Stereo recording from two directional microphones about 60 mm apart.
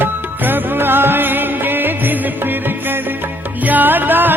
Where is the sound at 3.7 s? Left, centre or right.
Right.